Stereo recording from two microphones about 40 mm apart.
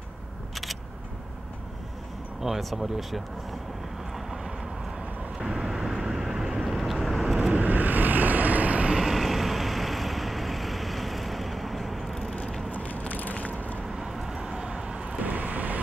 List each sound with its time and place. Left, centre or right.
2.4 s speech: centre
5.4 s vehicle: centre
7.5 s vehicle: right
8.9 s vehicle: centre
12.1 s a sound: centre
12.7 s a sound: left
13.8 s vehicle: centre
15.2 s vehicle: right